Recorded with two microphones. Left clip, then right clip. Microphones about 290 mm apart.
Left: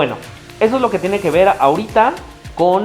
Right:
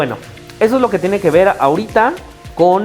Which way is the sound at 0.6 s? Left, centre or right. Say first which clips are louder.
Right 2 dB; right.